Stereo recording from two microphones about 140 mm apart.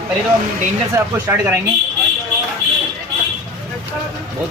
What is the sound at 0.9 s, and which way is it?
Speech, 15° right (ahead or behind).